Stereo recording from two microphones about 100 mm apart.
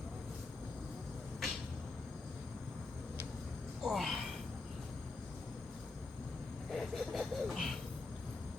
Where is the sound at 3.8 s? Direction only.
Centre (ahead or behind).